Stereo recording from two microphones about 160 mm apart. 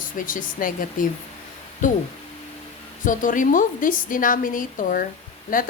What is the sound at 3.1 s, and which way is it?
A woman's voice, 55° left (ahead or behind).